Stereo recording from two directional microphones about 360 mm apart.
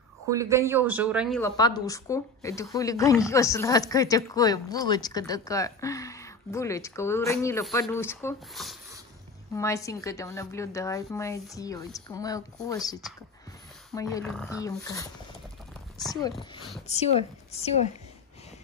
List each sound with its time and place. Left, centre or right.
0.3 s speech: centre
13.9 s speech: centre
16.8 s speech: centre